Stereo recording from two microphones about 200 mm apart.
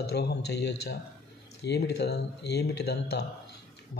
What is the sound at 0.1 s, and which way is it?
Speech, 55° left (ahead or behind).